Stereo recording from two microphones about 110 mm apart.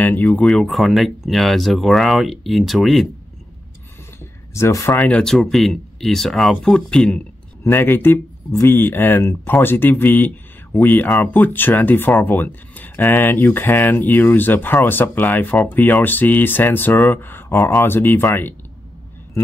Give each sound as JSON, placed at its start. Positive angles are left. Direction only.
{"t": 0.0, "sound": "speech", "side_deg": 15}
{"t": 0.5, "sound": "speech", "side_deg": 0}
{"t": 4.2, "sound": "a sound", "side_deg": 25}
{"t": 5.0, "sound": "speech", "side_deg": 5}
{"t": 7.6, "sound": "speech", "side_deg": 20}